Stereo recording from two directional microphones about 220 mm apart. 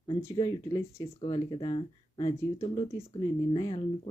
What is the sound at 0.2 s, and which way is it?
Speech, 15° left (ahead or behind).